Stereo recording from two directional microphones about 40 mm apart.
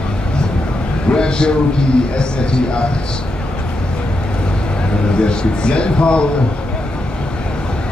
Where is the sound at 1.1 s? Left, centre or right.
Left.